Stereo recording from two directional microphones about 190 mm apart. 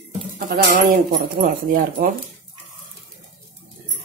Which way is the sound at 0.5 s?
45° right (ahead or behind).